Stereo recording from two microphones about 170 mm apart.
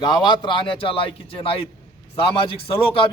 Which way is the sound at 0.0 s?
25° left (ahead or behind).